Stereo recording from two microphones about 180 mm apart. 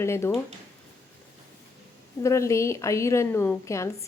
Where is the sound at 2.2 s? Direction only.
15° left (ahead or behind).